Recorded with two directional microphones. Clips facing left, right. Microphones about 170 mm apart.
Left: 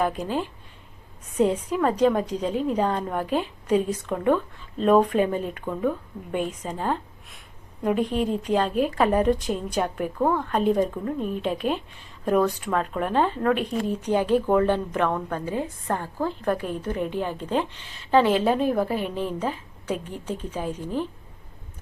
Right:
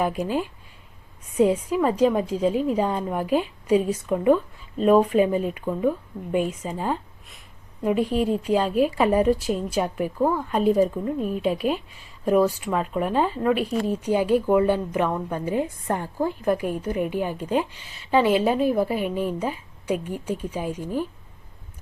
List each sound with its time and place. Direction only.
0.0 s a woman's voice: 10° right (ahead or behind)
8.0 s a woman's voice: 40° right (ahead or behind)
8.4 s a woman's voice: 10° right (ahead or behind)